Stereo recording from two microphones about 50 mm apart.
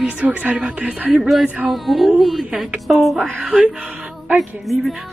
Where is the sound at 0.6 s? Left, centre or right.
Right.